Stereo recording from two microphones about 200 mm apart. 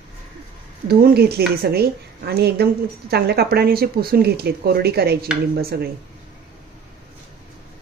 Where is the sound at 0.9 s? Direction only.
50° right (ahead or behind).